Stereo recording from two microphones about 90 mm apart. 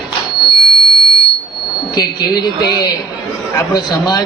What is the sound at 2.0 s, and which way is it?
A man's voice, 50° left (ahead or behind).